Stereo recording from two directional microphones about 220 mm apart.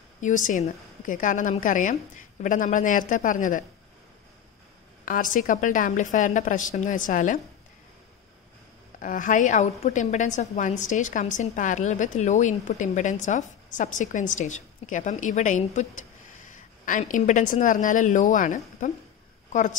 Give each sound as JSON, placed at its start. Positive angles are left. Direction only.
{"t": 0.2, "sound": "a woman's voice", "side_deg": 35}
{"t": 5.0, "sound": "a woman's voice", "side_deg": 40}
{"t": 9.0, "sound": "a woman's voice", "side_deg": 35}